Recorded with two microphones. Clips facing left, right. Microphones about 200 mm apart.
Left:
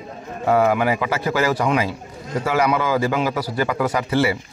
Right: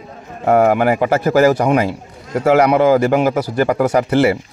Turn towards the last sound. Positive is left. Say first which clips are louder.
# right 6 dB
turn(degrees=-45)  # may be behind; listen again after turning